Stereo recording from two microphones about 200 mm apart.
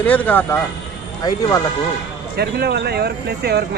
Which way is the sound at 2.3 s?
55° right (ahead or behind).